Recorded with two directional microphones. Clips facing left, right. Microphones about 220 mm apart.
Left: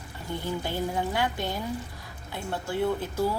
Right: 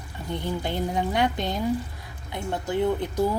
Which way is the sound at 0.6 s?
20° right (ahead or behind).